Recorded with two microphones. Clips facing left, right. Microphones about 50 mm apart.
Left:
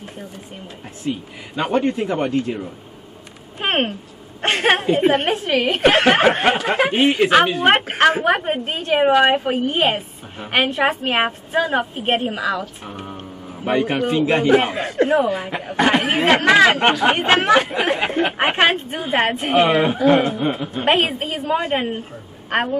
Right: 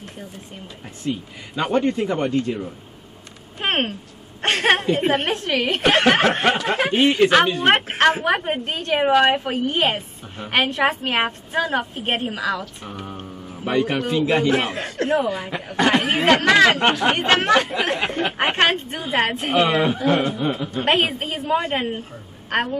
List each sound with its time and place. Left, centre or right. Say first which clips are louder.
1.0 s speech: left 1 dB; centre
3.5 s a sound: left 2 dB; centre
4.4 s a woman's voice: left 1 dB; centre
15.2 s speech: left 3 dB; left
15.9 s a woman's voice: even; centre
19.6 s speech: left 4 dB; centre
20.3 s speech: left 2 dB; left
20.7 s a woman's voice: left 2 dB; centre